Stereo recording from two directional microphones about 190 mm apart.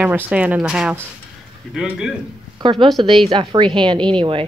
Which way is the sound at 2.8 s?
25° right (ahead or behind).